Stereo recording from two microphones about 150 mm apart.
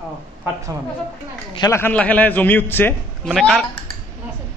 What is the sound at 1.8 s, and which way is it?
Speech, 10° left (ahead or behind).